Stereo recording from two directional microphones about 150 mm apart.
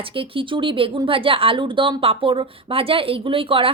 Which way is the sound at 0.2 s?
35° right (ahead or behind).